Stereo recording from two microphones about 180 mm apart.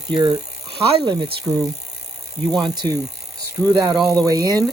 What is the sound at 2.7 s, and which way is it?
Speech, 25° right (ahead or behind).